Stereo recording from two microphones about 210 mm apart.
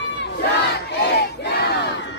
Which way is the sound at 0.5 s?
55° left (ahead or behind).